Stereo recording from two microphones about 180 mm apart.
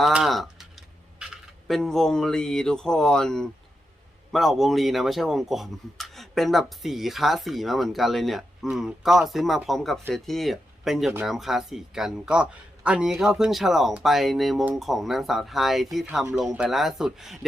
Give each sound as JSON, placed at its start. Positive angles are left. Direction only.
{"t": 0.0, "sound": "typing", "side_deg": 0}
{"t": 4.3, "sound": "speech", "side_deg": 0}